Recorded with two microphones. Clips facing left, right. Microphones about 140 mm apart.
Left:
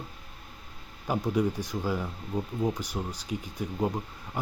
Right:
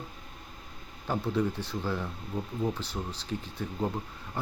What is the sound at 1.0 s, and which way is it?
Speech, 10° left (ahead or behind).